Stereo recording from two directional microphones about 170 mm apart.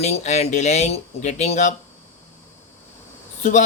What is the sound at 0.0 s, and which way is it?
Speech, 40° left (ahead or behind).